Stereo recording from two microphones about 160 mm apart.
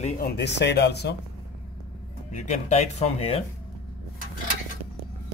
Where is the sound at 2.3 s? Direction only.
45° left (ahead or behind).